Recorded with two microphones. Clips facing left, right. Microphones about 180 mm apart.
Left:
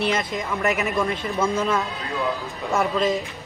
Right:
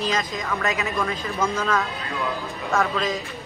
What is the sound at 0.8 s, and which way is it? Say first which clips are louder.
Speech: left 2 dB; 20° left (ahead or behind).